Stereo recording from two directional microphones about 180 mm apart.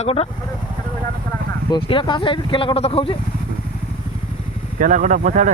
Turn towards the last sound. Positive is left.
turn(degrees=-45)  # may be behind; listen again after turning